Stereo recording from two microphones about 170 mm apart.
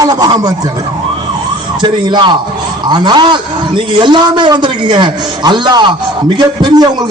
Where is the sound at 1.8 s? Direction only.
25° right (ahead or behind).